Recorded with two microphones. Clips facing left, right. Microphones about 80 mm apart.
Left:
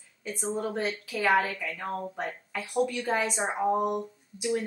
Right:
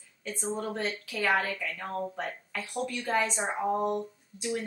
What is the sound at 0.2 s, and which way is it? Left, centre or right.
A woman's voice, centre.